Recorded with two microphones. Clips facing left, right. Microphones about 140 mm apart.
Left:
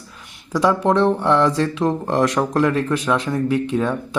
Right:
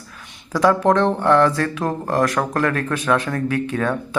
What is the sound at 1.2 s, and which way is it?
Speech, 15° left (ahead or behind).